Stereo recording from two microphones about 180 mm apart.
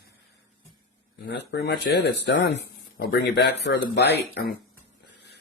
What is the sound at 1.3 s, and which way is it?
Speech, 70° left (ahead or behind).